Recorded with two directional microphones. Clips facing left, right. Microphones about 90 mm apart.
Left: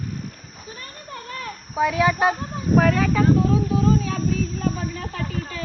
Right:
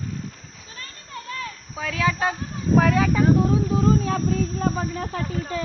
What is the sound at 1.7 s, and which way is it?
Speech, 15° left (ahead or behind).